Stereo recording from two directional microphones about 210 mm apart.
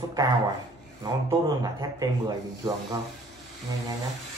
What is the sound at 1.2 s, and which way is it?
Speech, 15° right (ahead or behind).